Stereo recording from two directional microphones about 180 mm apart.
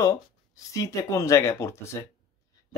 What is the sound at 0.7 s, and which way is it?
Speech, 15° left (ahead or behind).